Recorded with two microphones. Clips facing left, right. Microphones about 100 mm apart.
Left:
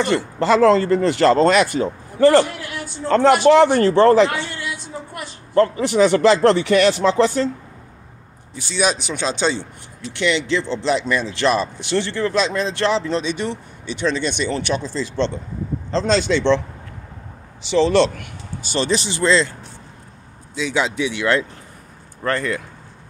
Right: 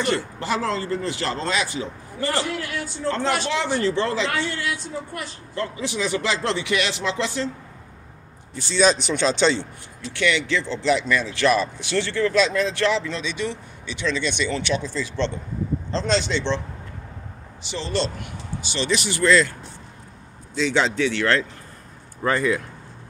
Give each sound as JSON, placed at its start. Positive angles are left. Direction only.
{"t": 0.1, "sound": "speech", "side_deg": 70}
{"t": 4.3, "sound": "a sound", "side_deg": 20}
{"t": 5.5, "sound": "speech", "side_deg": 55}
{"t": 8.5, "sound": "speech", "side_deg": 10}
{"t": 10.1, "sound": "speech", "side_deg": 25}
{"t": 17.6, "sound": "a man's voice", "side_deg": 80}
{"t": 18.6, "sound": "speech", "side_deg": 45}
{"t": 20.5, "sound": "speech", "side_deg": 5}
{"t": 22.2, "sound": "speech", "side_deg": -5}